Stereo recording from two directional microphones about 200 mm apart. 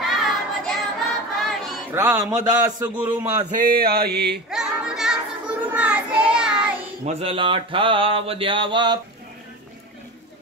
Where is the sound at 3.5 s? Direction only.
45° right (ahead or behind).